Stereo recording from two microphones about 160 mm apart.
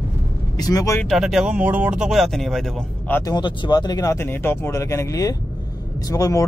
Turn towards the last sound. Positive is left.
turn(degrees=20)  # may be behind; listen again after turning